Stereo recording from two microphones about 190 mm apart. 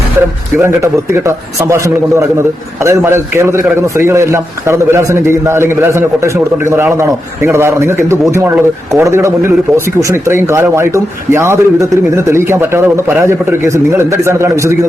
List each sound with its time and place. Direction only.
2.8 s a man's voice: 15° right (ahead or behind)